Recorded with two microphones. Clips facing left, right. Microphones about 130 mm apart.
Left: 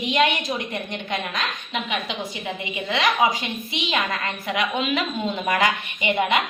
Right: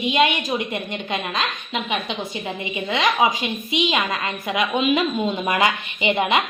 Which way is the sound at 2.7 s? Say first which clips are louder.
Right 1 dB; 25° right (ahead or behind).